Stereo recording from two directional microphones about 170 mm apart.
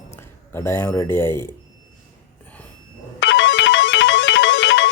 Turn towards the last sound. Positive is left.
turn(degrees=90)